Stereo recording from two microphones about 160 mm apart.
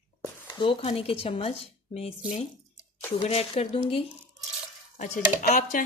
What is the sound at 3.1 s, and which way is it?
Speech, 40° left (ahead or behind).